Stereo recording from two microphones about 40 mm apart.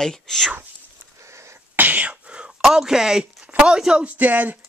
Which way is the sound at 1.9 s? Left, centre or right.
Right.